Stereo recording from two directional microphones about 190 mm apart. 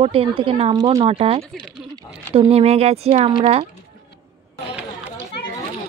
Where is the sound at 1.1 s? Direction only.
30° right (ahead or behind).